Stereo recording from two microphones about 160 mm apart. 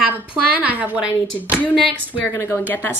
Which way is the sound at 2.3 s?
20° left (ahead or behind).